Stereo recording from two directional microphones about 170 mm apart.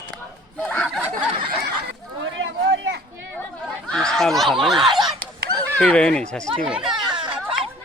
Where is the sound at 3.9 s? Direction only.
5° left (ahead or behind).